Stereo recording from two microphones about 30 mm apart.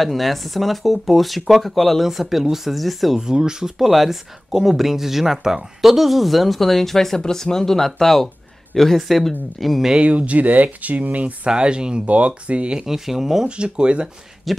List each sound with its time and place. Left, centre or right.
0.0 s speech: centre
2.0 s speech: centre
3.2 s speech: right
3.8 s speech: centre
10.0 s speech: right
11.4 s speech: right
12.1 s speech: right
12.8 s speech: centre
13.5 s speech: right
14.5 s speech: centre